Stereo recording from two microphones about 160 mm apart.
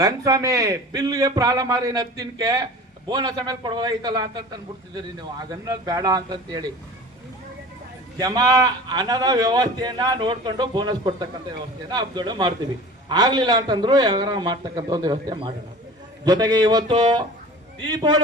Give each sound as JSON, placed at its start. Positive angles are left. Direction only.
{"t": 0.0, "sound": "a man's voice", "side_deg": -20}
{"t": 8.2, "sound": "a man's voice", "side_deg": -25}